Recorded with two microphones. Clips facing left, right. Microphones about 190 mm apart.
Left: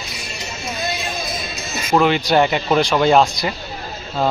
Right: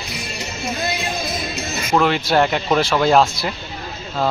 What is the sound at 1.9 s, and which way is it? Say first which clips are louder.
Speech: left 2 dB; centre (ahead or behind).